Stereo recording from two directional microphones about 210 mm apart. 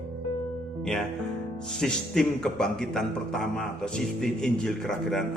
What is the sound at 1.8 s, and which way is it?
A man's voice, centre (ahead or behind).